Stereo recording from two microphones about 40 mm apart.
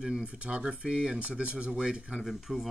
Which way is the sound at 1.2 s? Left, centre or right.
Right.